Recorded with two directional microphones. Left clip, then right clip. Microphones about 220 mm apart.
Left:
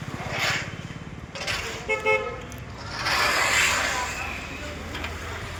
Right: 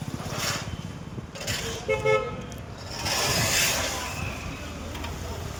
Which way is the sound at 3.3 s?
65° right (ahead or behind).